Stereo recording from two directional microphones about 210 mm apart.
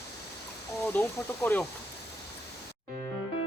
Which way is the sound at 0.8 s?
10° left (ahead or behind).